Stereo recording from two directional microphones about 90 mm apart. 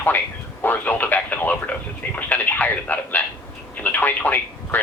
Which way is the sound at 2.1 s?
20° left (ahead or behind).